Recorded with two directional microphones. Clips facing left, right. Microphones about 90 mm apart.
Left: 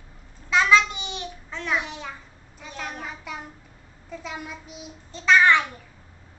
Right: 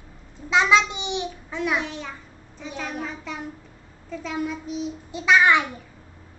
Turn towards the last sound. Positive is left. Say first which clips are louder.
# even
turn(degrees=-10)  # may be behind; listen again after turning